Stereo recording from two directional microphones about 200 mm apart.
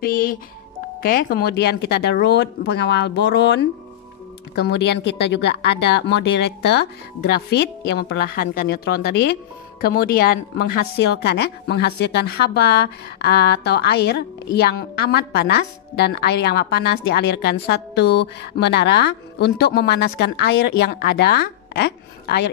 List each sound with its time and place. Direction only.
0.0 s music: 45° left (ahead or behind)
1.0 s a woman's voice: 45° left (ahead or behind)
11.2 s a woman's voice: 55° left (ahead or behind)